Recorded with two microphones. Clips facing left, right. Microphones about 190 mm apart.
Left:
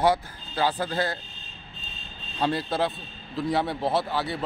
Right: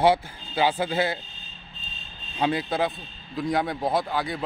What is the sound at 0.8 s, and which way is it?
Speech, 10° right (ahead or behind).